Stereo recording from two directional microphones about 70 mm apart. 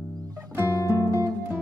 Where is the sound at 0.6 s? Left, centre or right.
Left.